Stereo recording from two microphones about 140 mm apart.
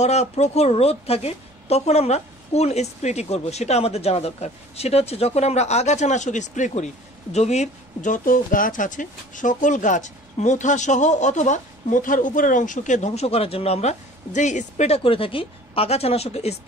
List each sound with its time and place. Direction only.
0.0 s a woman's voice: 50° left (ahead or behind)
15.0 s a woman's voice: 40° left (ahead or behind)